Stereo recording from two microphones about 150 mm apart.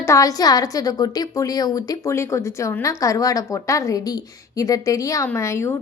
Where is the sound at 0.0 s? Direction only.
20° left (ahead or behind).